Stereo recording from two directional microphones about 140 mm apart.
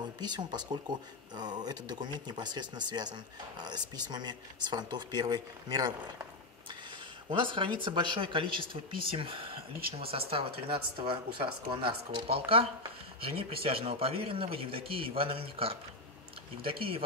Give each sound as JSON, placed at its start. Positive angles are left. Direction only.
{"t": 0.2, "sound": "speech", "side_deg": -30}
{"t": 7.2, "sound": "speech", "side_deg": -35}